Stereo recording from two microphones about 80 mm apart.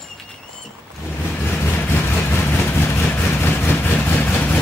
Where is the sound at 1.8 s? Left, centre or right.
Left.